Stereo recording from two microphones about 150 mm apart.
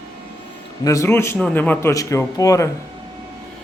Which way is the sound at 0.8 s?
20° left (ahead or behind).